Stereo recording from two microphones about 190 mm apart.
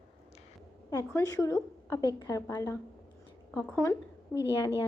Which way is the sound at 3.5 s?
5° left (ahead or behind).